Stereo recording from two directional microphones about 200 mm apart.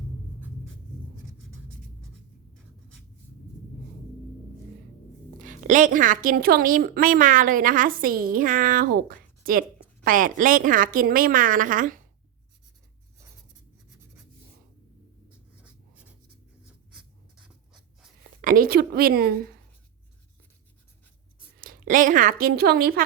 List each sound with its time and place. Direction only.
5.4 s a woman's voice: 40° right (ahead or behind)
16.6 s writing: 5° right (ahead or behind)
18.2 s speech: 45° right (ahead or behind)
21.6 s speech: 45° right (ahead or behind)